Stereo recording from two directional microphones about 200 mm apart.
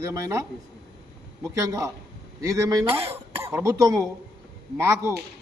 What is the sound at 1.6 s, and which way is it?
Speech, 15° right (ahead or behind).